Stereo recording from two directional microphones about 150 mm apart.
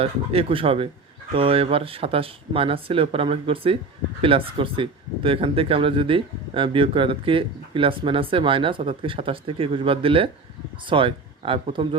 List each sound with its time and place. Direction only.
0.0 s speech: 40° right (ahead or behind)